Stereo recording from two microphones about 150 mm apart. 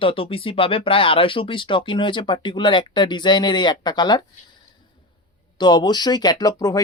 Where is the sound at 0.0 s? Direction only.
40° left (ahead or behind).